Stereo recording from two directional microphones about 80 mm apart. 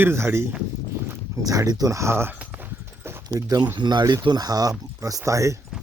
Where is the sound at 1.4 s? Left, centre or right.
Right.